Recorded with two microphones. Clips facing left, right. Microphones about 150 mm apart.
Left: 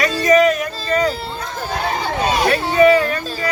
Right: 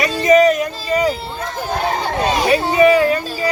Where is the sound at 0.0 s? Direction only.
20° right (ahead or behind).